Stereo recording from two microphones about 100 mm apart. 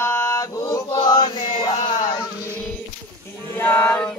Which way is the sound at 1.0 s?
45° left (ahead or behind).